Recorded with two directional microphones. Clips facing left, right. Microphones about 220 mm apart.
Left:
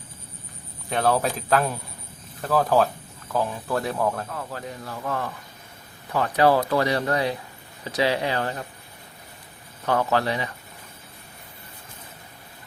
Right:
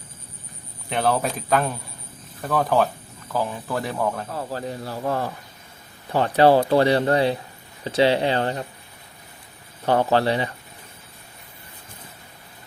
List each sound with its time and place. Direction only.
0.9 s speech: centre (ahead or behind)
4.3 s a man's voice: 30° right (ahead or behind)
9.8 s speech: 30° right (ahead or behind)